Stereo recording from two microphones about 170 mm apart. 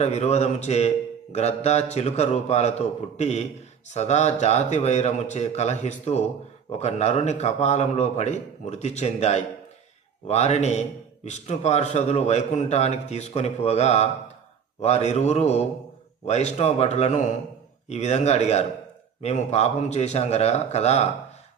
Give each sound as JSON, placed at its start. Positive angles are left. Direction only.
{"t": 0.0, "sound": "a man's voice", "side_deg": 40}